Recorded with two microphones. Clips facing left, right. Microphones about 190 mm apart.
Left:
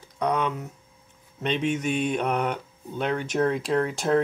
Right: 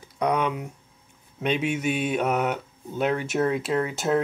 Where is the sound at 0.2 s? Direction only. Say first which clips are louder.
Right 1 dB; 10° right (ahead or behind).